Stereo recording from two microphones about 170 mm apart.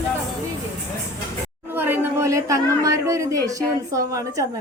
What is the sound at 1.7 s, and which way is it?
Speech, 15° right (ahead or behind).